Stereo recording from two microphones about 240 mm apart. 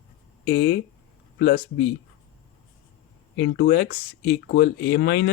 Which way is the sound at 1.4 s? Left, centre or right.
Left.